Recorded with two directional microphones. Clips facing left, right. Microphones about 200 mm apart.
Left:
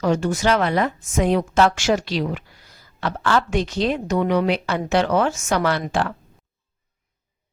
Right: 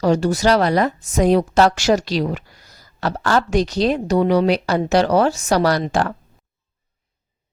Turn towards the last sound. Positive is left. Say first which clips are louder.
# right 4 dB
turn(degrees=-45)  # may be behind; listen again after turning